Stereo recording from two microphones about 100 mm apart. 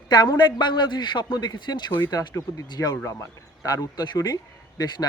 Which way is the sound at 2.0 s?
35° left (ahead or behind).